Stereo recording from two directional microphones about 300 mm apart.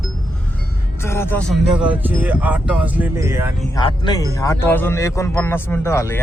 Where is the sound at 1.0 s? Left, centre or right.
Centre.